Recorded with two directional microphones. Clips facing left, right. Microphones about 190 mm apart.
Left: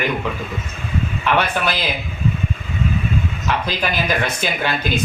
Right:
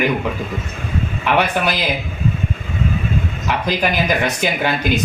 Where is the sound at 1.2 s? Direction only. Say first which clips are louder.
Right 2 dB; 15° right (ahead or behind).